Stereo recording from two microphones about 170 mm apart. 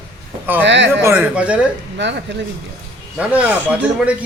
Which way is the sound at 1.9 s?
90° right.